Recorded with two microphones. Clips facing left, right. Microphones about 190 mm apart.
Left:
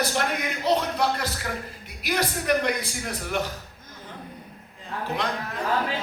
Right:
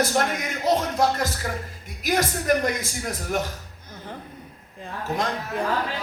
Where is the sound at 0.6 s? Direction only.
45° right (ahead or behind).